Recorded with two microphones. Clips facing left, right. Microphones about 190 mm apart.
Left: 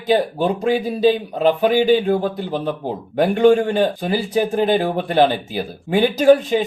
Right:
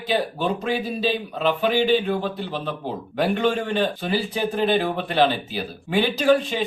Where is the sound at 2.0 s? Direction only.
45° left (ahead or behind).